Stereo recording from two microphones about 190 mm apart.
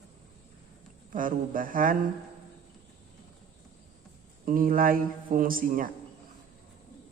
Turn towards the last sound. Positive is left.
turn(degrees=-50)  # may be behind; listen again after turning